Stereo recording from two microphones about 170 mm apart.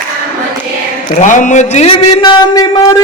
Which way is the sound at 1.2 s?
45° left (ahead or behind).